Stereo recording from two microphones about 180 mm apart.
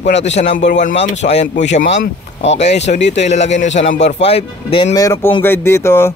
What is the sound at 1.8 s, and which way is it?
Speech, 75° left (ahead or behind).